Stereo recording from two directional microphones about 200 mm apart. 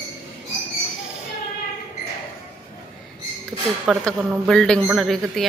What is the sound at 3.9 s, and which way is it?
A woman's voice, centre (ahead or behind).